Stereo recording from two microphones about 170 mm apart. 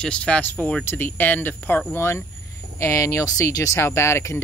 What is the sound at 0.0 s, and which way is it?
Speech, 5° left (ahead or behind).